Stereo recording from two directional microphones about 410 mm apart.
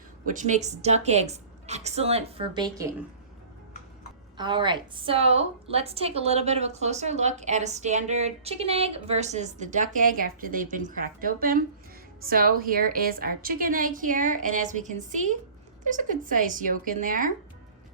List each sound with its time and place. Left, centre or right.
0.3 s a woman's voice: centre
4.4 s a woman's voice: centre